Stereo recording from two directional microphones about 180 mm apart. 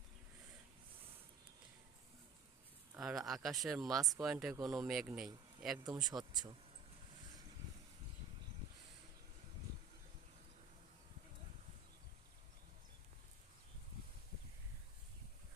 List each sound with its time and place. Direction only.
2.9 s speech: centre (ahead or behind)
3.9 s speech: 20° right (ahead or behind)
4.2 s speech: centre (ahead or behind)
6.0 s speech: 25° right (ahead or behind)